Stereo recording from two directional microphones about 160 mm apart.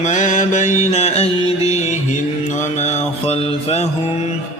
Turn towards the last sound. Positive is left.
turn(degrees=40)  # may be behind; listen again after turning